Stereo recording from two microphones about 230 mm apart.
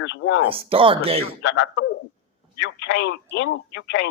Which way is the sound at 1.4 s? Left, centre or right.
Left.